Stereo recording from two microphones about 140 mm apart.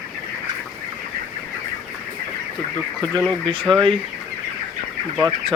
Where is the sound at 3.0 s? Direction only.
5° left (ahead or behind).